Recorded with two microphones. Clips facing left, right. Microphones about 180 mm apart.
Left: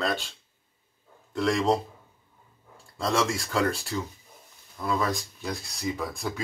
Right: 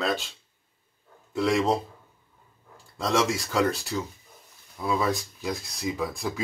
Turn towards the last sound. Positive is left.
turn(degrees=0)  # may be behind; listen again after turning